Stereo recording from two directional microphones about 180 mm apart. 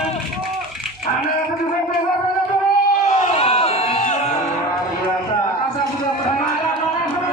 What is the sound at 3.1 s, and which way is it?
Crowd, 35° left (ahead or behind).